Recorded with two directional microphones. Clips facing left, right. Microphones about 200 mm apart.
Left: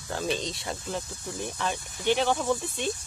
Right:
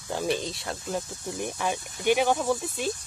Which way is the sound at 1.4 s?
15° right (ahead or behind).